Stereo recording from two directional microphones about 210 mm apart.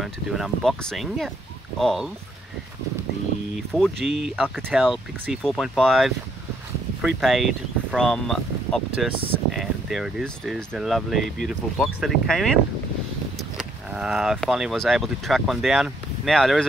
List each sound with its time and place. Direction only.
0.0 s speech: centre (ahead or behind)
3.5 s speech: centre (ahead or behind)
13.9 s speech: 5° right (ahead or behind)